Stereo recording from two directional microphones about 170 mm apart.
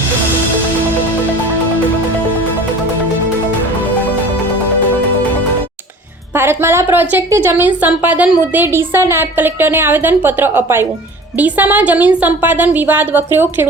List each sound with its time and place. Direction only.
6.3 s a woman's voice: 15° right (ahead or behind)